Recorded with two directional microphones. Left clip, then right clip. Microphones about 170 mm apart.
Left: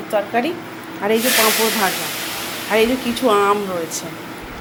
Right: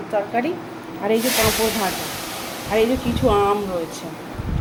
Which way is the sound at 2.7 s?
Centre (ahead or behind).